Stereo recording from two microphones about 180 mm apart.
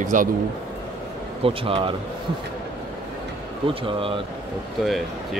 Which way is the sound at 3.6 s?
30° right (ahead or behind).